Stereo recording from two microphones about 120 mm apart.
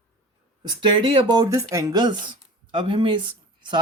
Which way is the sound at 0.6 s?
40° right (ahead or behind).